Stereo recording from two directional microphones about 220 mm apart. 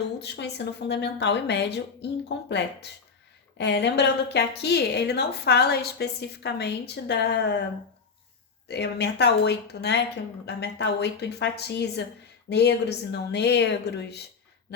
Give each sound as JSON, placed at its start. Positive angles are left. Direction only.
{"t": 0.2, "sound": "a woman's voice", "side_deg": 50}
{"t": 8.6, "sound": "a woman's voice", "side_deg": 50}